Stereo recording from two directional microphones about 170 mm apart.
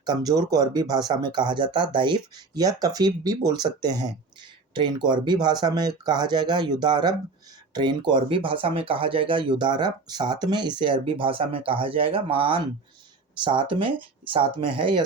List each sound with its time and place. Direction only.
0.0 s speech: 25° right (ahead or behind)